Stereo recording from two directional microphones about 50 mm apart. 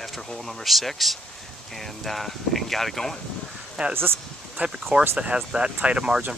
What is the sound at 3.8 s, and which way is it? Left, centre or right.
Speech, centre.